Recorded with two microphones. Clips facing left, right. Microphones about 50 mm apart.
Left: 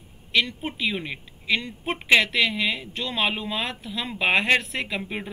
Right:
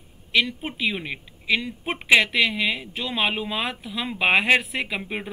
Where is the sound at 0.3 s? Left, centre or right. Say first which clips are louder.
Right 1 dB; centre.